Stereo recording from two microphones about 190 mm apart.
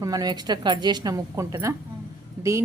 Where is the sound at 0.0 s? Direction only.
20° right (ahead or behind).